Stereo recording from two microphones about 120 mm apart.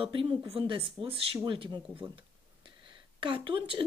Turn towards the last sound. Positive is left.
turn(degrees=-45)  # may be behind; listen again after turning